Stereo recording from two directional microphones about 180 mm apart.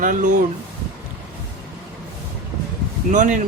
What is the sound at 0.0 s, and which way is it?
Speech, 50° right (ahead or behind).